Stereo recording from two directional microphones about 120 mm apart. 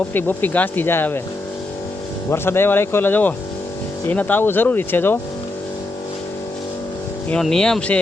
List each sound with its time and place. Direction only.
0.1 s speech: 15° left (ahead or behind)
2.3 s speech: 20° left (ahead or behind)
7.4 s speech: 5° left (ahead or behind)